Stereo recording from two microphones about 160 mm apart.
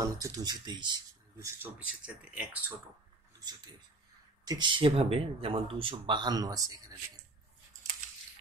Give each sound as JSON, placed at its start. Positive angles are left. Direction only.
{"t": 0.0, "sound": "speech", "side_deg": -20}
{"t": 1.4, "sound": "speech", "side_deg": -10}
{"t": 3.3, "sound": "speech", "side_deg": -25}